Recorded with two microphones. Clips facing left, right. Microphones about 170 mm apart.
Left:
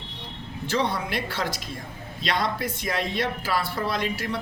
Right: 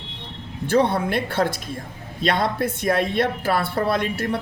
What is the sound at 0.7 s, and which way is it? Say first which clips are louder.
A man's voice: right 7 dB; 55° right (ahead or behind).